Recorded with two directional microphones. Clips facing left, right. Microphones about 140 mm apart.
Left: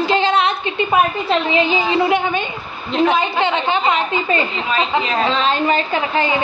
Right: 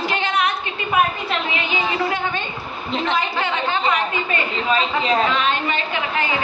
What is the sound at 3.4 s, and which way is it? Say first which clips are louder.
A woman's voice: left 4 dB; 20° left (ahead or behind).